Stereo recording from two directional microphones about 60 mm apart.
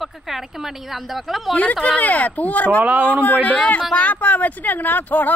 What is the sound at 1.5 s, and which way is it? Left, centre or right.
Speech, left.